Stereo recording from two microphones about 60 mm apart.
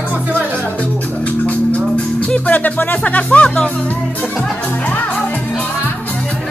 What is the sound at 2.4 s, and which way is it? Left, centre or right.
Speech, left.